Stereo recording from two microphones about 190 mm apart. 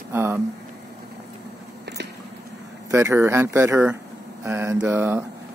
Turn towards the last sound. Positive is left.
turn(degrees=-10)  # may be behind; listen again after turning